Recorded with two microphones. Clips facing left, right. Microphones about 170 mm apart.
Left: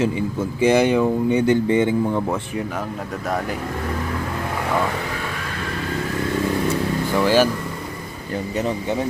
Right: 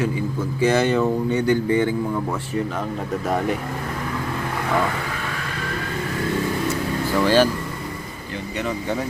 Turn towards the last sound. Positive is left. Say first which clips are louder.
# even
turn(degrees=10)  # may be behind; listen again after turning